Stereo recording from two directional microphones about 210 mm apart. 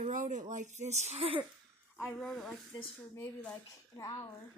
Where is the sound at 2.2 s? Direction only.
Centre (ahead or behind).